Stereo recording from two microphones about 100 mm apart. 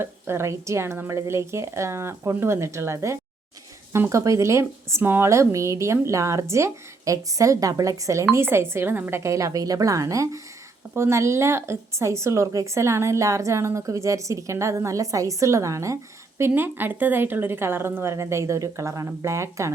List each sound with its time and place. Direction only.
0.0 s a woman's voice: 25° right (ahead or behind)
16.4 s a woman's voice: 20° right (ahead or behind)